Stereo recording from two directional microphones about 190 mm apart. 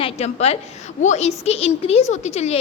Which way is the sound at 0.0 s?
35° left (ahead or behind).